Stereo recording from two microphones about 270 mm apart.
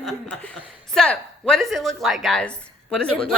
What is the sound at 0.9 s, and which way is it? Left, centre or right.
Speech, centre.